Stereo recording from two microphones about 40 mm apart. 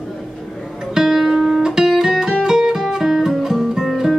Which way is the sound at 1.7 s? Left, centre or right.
Centre.